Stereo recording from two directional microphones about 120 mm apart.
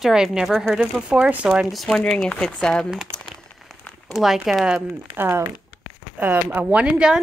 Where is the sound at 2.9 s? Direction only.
5° right (ahead or behind).